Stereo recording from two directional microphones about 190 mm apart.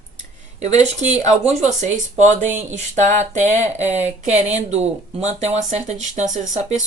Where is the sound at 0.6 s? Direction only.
35° right (ahead or behind).